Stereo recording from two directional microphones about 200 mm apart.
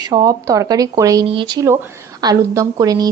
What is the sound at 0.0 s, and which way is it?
A woman's voice, 20° right (ahead or behind).